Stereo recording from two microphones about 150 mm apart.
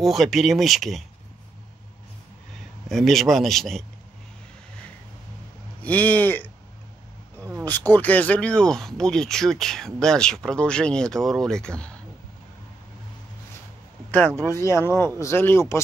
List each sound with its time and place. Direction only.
0.0 s speech: centre (ahead or behind)
2.9 s speech: centre (ahead or behind)
5.8 s speech: 10° left (ahead or behind)
7.3 s a sound: 15° right (ahead or behind)
7.9 s speech: 10° left (ahead or behind)
14.5 s speech: 20° left (ahead or behind)